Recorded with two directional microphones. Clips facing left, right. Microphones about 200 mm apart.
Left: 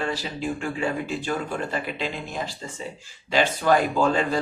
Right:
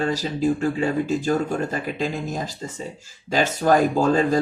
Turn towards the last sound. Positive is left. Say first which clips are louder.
# right 4 dB
turn(degrees=-40)  # may be behind; listen again after turning